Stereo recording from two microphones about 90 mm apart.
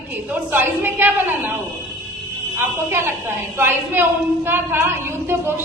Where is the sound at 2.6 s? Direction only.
25° right (ahead or behind).